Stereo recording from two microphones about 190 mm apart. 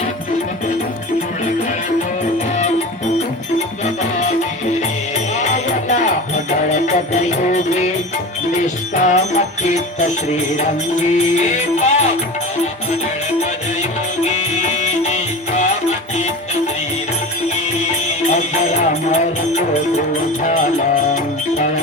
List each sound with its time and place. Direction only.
5.3 s music: 40° left (ahead or behind)
14.3 s music: 35° left (ahead or behind)
18.8 s music: 35° left (ahead or behind)